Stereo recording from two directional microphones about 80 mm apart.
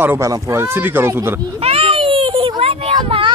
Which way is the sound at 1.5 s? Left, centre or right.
Right.